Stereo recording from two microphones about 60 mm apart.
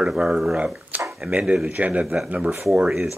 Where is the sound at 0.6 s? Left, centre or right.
Right.